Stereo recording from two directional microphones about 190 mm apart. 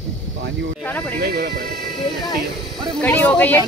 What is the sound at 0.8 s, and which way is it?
Speech, 10° left (ahead or behind).